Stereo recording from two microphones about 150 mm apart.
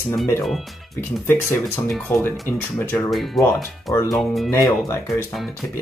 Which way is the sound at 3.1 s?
Centre (ahead or behind).